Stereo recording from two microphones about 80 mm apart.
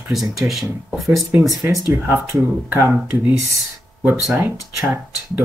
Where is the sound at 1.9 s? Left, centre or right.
Right.